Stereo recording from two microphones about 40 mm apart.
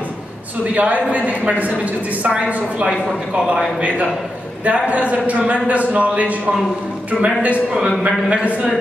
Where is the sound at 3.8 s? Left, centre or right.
Right.